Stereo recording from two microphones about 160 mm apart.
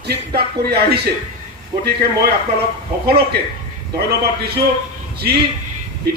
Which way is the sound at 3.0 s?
80° right.